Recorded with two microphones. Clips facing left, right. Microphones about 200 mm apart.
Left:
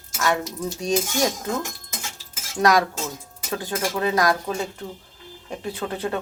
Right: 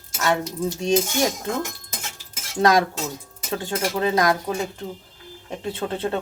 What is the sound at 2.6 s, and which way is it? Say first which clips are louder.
Speech: right 1 dB; 25° right (ahead or behind).